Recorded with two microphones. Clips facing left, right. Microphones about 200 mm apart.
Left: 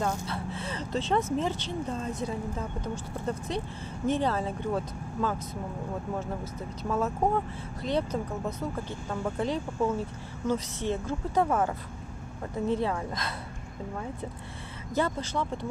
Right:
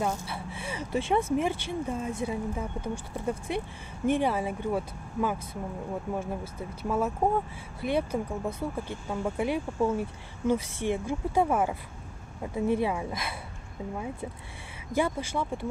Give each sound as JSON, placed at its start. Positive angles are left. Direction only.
{"t": 0.3, "sound": "speech", "side_deg": -10}
{"t": 15.0, "sound": "speech", "side_deg": -10}